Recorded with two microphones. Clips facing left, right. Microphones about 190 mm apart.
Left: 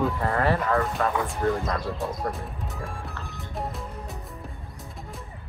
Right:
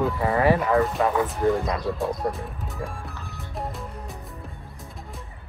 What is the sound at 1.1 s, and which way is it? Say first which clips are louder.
Speech: right 4 dB; centre (ahead or behind).